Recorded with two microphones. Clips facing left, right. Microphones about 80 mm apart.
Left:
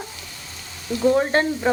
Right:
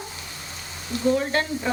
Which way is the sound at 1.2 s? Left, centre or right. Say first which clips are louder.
Left 5 dB; left.